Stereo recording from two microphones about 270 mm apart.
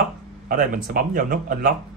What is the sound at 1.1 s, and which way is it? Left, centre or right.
Speech, right.